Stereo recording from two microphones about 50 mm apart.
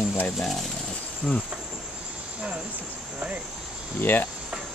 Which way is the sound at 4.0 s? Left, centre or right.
Left.